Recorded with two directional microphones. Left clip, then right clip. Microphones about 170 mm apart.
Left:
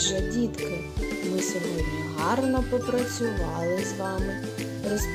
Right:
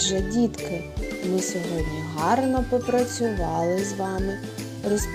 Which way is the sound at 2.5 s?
Centre (ahead or behind).